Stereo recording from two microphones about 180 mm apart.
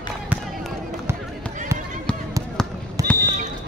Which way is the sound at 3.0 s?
20° right (ahead or behind).